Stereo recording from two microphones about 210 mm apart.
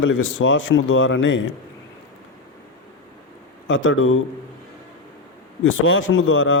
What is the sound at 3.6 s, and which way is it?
Speech, 65° left (ahead or behind).